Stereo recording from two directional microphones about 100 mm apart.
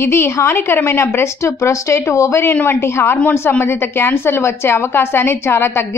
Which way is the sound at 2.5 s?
20° left (ahead or behind).